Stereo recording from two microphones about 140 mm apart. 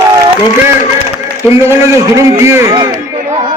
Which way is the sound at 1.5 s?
20° right (ahead or behind).